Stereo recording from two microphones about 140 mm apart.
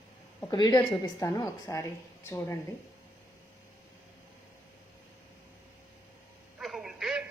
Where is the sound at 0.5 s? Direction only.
30° left (ahead or behind).